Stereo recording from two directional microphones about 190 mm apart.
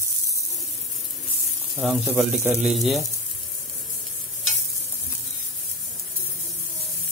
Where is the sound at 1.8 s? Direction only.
Centre (ahead or behind).